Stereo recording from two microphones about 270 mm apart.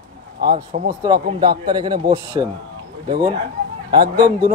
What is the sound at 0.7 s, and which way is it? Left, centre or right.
A man's voice, right.